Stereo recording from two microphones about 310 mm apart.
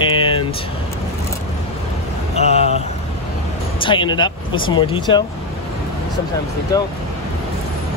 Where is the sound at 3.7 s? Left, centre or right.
Centre.